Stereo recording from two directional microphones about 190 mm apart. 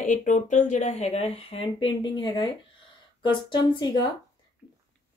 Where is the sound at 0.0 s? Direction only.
40° left (ahead or behind); by 4.1 s 25° left (ahead or behind).